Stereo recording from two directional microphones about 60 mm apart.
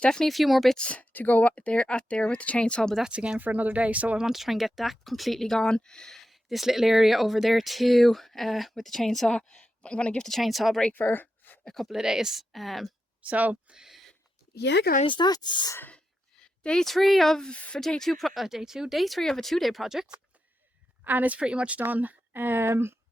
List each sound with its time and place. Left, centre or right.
0.0 s speech: centre
0.8 s speech: left
3.0 s a woman's voice: centre
4.2 s speech: centre
9.3 s speech: centre
10.2 s speech: centre
10.9 s a sound: left
11.6 s speech: centre
11.9 s speech: centre
13.2 s a woman's voice: right
13.7 s a sound: centre
16.4 s a woman's voice: centre
21.0 s a woman's voice: right